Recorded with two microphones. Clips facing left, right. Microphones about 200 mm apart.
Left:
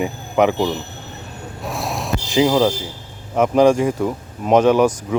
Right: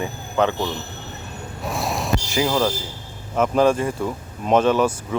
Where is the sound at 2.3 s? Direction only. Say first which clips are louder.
Left 7 dB; 15° left (ahead or behind).